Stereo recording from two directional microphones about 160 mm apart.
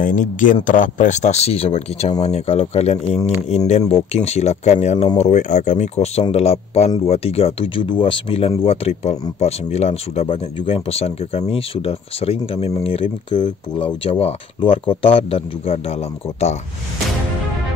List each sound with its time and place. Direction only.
0.0 s speech: 55° left (ahead or behind)